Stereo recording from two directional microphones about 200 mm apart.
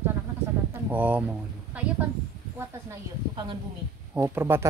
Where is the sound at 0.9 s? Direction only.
10° right (ahead or behind).